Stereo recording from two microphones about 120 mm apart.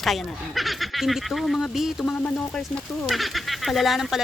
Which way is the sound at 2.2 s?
10° left (ahead or behind).